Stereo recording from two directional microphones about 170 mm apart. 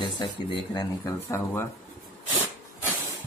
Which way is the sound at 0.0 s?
30° left (ahead or behind).